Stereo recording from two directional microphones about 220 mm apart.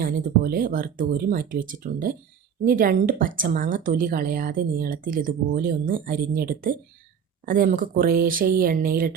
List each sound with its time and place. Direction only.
0.0 s speech: 40° right (ahead or behind)